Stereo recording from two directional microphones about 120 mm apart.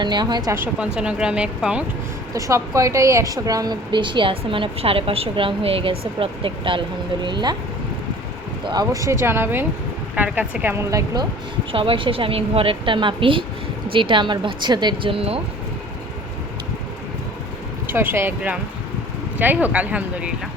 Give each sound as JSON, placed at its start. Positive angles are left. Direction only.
{"t": 0.0, "sound": "a woman's voice", "side_deg": -40}
{"t": 0.5, "sound": "a woman's voice", "side_deg": -20}
{"t": 2.3, "sound": "a woman's voice", "side_deg": -25}
{"t": 8.6, "sound": "a woman's voice", "side_deg": -35}
{"t": 11.7, "sound": "a woman's voice", "side_deg": -50}
{"t": 17.8, "sound": "a woman's voice", "side_deg": -20}